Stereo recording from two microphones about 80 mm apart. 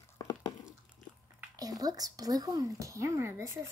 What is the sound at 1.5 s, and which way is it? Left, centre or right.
Speech, right.